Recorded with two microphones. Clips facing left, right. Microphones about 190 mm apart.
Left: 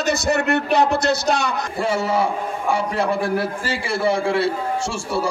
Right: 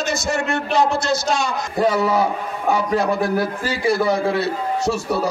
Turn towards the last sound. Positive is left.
turn(degrees=30)  # may be behind; listen again after turning